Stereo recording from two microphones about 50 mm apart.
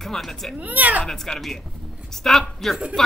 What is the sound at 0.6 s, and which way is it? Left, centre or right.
Speech, right.